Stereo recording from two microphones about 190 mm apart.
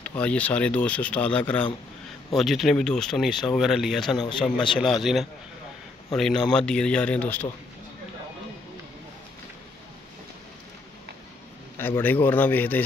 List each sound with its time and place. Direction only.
0.0 s speech: 5° left (ahead or behind)
4.2 s speech: 25° left (ahead or behind)
4.6 s speech: centre (ahead or behind)
11.7 s speech: 10° left (ahead or behind)